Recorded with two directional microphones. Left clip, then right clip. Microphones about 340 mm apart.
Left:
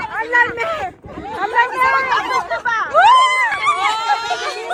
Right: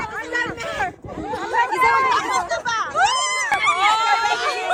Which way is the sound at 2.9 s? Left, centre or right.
Centre.